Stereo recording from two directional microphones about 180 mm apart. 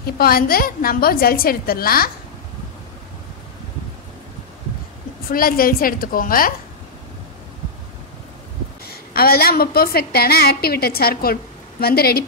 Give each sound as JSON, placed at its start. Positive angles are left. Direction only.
{"t": 0.0, "sound": "a woman's voice", "side_deg": 55}
{"t": 5.3, "sound": "a woman's voice", "side_deg": 55}
{"t": 8.8, "sound": "a woman's voice", "side_deg": 55}